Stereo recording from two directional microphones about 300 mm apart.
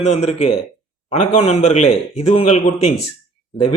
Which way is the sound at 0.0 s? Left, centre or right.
Left.